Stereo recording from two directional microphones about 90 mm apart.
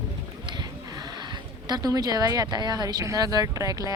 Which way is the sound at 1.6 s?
45° right (ahead or behind).